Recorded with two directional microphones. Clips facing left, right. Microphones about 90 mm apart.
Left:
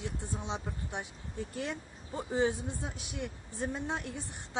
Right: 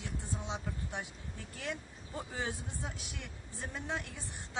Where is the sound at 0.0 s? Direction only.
20° left (ahead or behind).